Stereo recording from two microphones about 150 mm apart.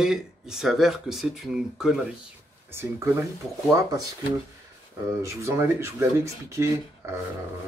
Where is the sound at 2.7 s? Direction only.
15° right (ahead or behind).